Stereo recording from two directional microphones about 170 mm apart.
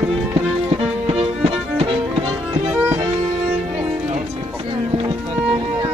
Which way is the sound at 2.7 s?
10° right (ahead or behind).